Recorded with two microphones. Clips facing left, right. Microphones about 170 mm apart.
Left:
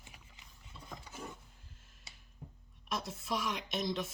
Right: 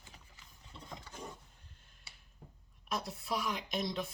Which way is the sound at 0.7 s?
20° right (ahead or behind).